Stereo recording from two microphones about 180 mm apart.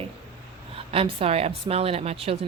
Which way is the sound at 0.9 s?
30° right (ahead or behind).